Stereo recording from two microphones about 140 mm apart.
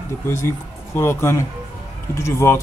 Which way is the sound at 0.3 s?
20° left (ahead or behind).